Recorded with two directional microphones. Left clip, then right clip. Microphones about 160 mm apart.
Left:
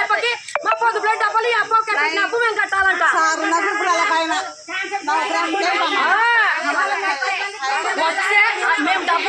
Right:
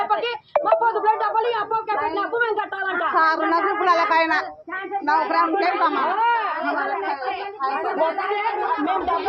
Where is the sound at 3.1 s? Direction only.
90° left.